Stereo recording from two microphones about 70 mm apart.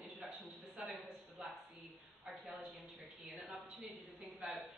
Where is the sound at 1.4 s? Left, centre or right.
Centre.